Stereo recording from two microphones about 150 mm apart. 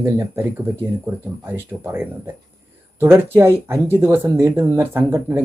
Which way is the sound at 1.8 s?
15° right (ahead or behind).